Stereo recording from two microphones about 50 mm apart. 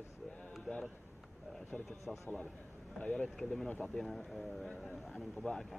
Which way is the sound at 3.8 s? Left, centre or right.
Centre.